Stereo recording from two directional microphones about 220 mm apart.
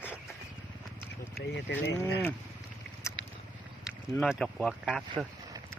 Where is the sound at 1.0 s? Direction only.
10° left (ahead or behind).